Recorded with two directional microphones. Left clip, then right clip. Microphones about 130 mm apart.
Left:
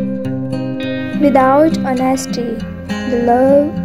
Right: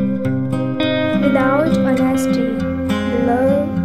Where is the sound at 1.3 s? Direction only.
55° left (ahead or behind).